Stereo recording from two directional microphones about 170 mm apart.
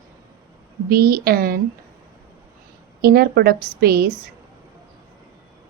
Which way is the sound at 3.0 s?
65° right (ahead or behind).